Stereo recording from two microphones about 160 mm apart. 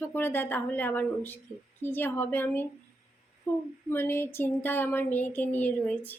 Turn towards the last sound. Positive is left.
turn(degrees=10)  # may be behind; listen again after turning